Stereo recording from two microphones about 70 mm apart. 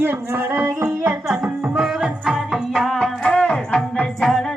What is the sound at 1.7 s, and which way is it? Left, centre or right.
Music, centre.